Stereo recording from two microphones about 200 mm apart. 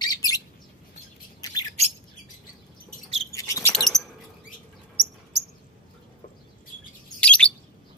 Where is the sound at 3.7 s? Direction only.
Centre (ahead or behind).